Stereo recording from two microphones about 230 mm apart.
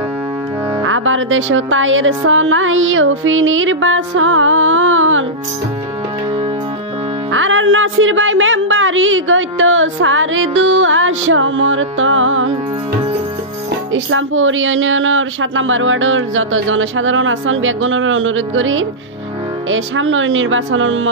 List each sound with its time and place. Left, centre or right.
0.8 s a woman's voice: right
7.3 s a woman's voice: right
13.9 s a woman's voice: right